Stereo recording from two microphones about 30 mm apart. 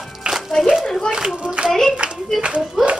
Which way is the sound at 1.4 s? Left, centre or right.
Right.